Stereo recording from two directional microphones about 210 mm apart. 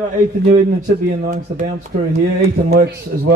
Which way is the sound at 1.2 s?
40° right (ahead or behind).